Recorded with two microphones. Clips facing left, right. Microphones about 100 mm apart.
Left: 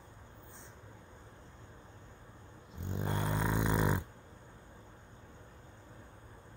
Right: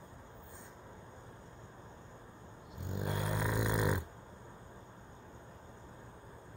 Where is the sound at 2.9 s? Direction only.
30° left (ahead or behind).